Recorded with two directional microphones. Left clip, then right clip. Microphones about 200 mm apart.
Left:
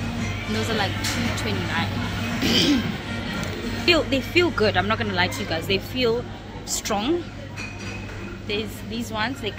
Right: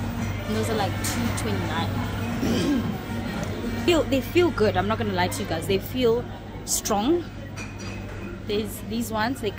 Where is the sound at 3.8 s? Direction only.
15° right (ahead or behind).